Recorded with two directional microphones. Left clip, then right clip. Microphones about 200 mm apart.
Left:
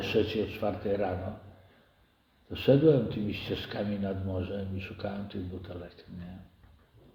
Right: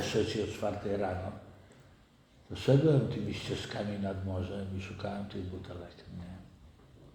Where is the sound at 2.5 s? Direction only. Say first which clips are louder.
Left 5 dB; 25° left (ahead or behind).